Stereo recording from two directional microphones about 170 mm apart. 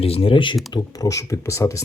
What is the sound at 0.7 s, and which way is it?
Speech, 20° left (ahead or behind).